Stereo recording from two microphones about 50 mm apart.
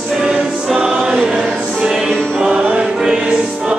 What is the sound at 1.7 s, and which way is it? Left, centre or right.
Music, centre.